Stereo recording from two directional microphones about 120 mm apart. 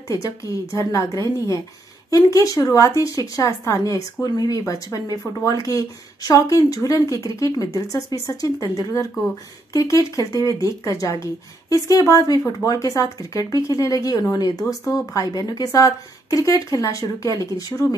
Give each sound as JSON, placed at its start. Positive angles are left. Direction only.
{"t": 0.1, "sound": "speech", "side_deg": 30}